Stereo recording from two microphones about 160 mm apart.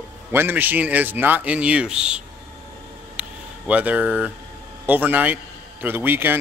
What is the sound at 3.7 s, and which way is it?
Speech, 10° right (ahead or behind).